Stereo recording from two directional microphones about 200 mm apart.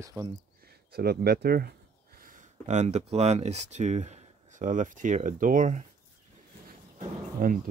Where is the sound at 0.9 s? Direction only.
50° right (ahead or behind).